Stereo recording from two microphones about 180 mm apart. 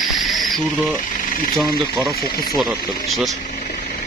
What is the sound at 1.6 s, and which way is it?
Speech, 20° right (ahead or behind).